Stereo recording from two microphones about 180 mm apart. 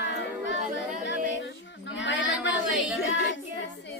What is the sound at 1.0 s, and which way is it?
Female singing, 85° left.